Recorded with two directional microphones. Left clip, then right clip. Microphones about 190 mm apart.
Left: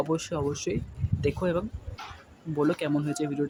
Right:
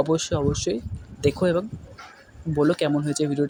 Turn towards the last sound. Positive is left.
turn(degrees=-20)  # may be behind; listen again after turning